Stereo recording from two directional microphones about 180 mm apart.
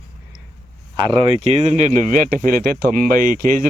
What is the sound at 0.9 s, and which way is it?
Speech, 25° right (ahead or behind).